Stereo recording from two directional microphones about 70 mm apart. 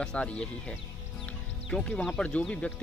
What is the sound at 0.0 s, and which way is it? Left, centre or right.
Speech, centre.